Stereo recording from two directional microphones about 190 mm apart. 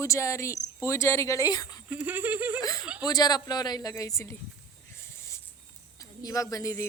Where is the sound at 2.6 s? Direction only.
20° left (ahead or behind).